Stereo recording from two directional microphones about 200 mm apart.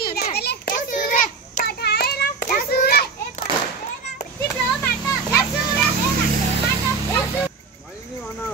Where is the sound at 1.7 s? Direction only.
55° left (ahead or behind).